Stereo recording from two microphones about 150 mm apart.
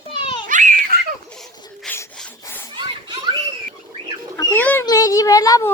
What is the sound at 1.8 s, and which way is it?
Rub, 15° left (ahead or behind).